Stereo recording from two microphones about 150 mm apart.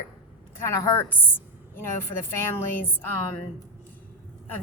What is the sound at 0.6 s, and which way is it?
A woman's voice, 20° left (ahead or behind).